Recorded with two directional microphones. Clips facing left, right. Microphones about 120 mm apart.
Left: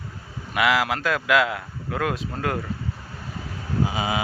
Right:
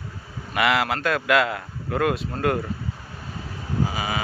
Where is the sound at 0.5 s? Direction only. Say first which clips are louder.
Even; centre (ahead or behind).